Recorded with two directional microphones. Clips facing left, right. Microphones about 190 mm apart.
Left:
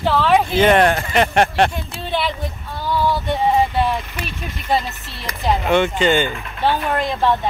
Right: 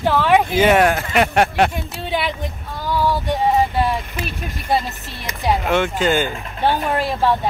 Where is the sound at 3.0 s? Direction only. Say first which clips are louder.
Even; 10° right (ahead or behind).